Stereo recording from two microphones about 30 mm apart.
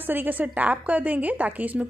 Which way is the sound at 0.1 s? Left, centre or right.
Right.